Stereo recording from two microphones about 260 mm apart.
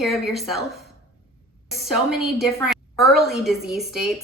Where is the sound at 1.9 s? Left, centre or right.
Centre.